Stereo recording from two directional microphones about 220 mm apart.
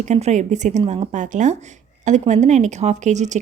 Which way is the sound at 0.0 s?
30° right (ahead or behind).